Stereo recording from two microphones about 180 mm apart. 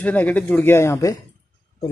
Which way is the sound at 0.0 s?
10° left (ahead or behind).